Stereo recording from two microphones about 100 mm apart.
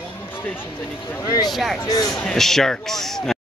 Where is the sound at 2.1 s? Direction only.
5° left (ahead or behind).